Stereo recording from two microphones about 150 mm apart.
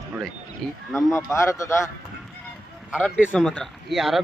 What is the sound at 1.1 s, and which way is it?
Speech, 20° left (ahead or behind).